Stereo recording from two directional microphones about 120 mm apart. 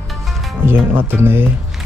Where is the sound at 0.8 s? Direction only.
15° right (ahead or behind).